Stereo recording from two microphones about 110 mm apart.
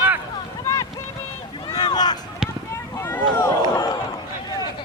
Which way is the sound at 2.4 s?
5° right (ahead or behind).